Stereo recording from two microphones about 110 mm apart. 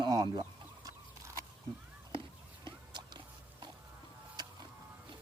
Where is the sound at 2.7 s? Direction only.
45° right (ahead or behind).